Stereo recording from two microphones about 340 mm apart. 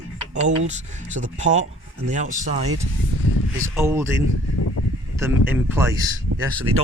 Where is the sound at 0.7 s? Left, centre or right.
Right.